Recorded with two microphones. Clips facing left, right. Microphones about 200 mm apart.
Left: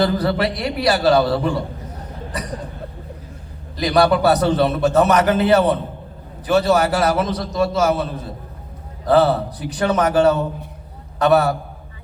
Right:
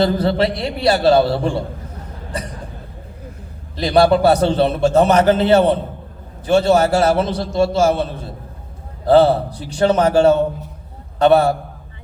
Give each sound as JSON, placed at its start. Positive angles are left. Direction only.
{"t": 0.0, "sound": "a man's voice", "side_deg": -25}
{"t": 3.8, "sound": "a man's voice", "side_deg": -30}